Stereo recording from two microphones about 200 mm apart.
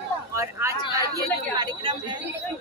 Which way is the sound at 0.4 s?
15° right (ahead or behind).